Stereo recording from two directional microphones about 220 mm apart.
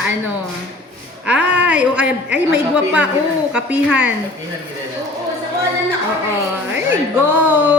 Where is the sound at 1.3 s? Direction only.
50° right (ahead or behind).